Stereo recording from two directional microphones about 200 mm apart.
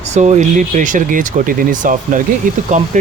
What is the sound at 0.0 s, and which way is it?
Speech, 35° right (ahead or behind).